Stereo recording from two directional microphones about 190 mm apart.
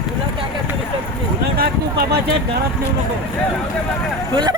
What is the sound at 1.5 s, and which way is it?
Speech, 55° right (ahead or behind).